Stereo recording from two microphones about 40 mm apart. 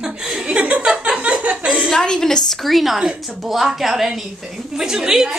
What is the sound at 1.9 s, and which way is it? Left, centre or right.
Speech, centre.